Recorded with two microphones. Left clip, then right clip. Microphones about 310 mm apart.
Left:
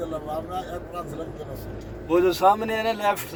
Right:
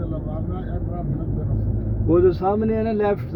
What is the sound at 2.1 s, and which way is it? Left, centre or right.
Speech, left.